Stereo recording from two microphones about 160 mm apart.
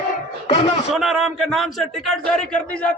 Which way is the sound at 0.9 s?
Centre (ahead or behind).